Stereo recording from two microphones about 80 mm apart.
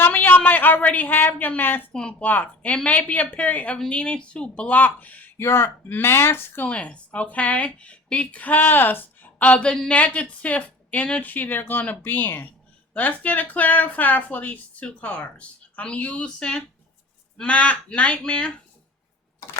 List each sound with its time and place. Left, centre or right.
0.0 s speech: left
1.9 s speech: centre; by 6.7 s left
6.7 s speech: centre